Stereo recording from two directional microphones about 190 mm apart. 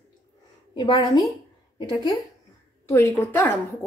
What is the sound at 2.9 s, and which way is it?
Speech, 15° left (ahead or behind).